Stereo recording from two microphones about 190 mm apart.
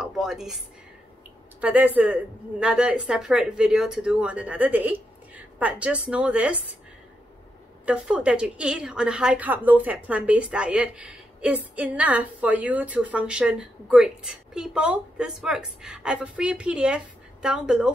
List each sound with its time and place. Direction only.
0.0 s a sound: 5° right (ahead or behind)
1.6 s a woman's voice: 10° right (ahead or behind)
7.8 s a woman's voice: 5° right (ahead or behind)